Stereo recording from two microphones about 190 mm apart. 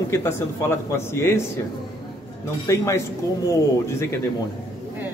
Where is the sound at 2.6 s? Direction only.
15° left (ahead or behind).